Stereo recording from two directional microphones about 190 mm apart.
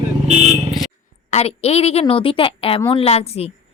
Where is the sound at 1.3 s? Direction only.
35° left (ahead or behind).